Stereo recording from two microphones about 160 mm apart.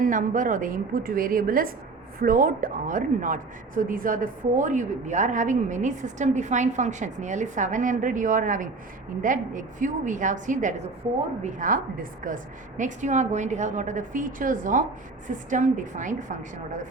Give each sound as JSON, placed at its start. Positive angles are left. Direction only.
{"t": 0.0, "sound": "a woman's voice", "side_deg": -55}